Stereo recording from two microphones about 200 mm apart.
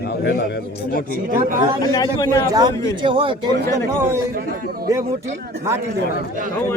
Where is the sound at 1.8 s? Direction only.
20° left (ahead or behind).